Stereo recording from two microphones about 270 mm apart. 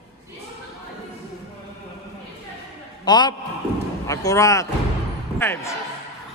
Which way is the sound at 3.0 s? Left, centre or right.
Centre.